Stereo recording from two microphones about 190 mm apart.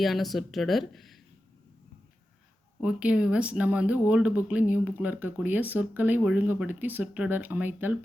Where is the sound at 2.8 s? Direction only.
5° right (ahead or behind).